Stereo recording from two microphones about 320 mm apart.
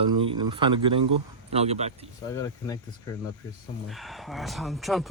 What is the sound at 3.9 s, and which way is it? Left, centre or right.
Speech, centre.